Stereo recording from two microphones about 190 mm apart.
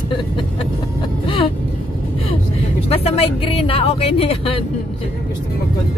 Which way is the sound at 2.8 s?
30° left (ahead or behind).